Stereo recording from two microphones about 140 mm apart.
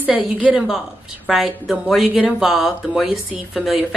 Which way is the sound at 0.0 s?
10° right (ahead or behind).